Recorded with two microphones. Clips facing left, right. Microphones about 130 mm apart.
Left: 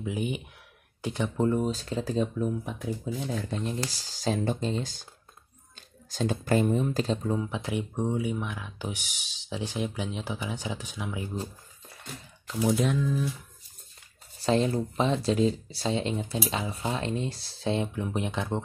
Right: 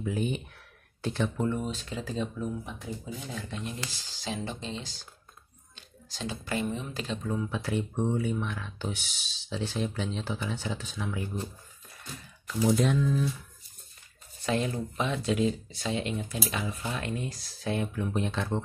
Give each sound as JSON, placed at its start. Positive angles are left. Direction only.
{"t": 0.0, "sound": "speech", "side_deg": 15}
{"t": 1.4, "sound": "speech", "side_deg": 40}
{"t": 3.3, "sound": "speech", "side_deg": 40}
{"t": 7.3, "sound": "speech", "side_deg": 20}
{"t": 12.5, "sound": "speech", "side_deg": 0}
{"t": 14.4, "sound": "speech", "side_deg": 30}